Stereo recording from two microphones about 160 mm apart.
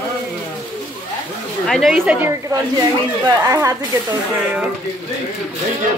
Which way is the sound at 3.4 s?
20° right (ahead or behind).